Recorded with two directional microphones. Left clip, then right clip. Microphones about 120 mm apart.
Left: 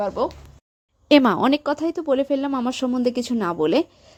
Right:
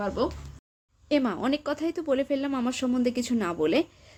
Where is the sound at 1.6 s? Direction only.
35° left (ahead or behind).